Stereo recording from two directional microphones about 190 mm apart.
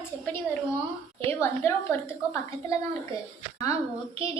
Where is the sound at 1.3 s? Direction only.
10° left (ahead or behind).